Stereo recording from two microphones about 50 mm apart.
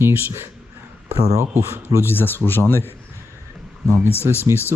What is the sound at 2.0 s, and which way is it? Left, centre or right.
Speech, left.